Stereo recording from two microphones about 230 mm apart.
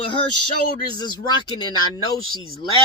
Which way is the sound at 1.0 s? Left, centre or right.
Centre.